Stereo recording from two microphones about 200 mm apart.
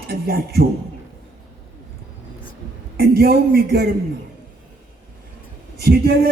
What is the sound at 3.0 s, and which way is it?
Speech, 50° right (ahead or behind).